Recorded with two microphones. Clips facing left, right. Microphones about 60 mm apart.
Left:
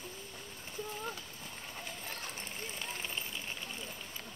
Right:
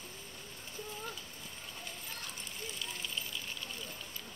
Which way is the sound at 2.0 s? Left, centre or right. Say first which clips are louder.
Left 2 dB; left.